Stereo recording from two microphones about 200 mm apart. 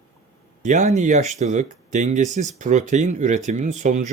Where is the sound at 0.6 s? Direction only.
40° right (ahead or behind).